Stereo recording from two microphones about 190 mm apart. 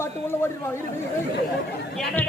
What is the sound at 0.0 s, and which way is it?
Speech, 15° left (ahead or behind).